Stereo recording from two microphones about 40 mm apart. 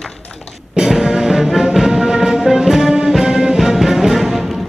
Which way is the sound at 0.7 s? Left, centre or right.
Centre.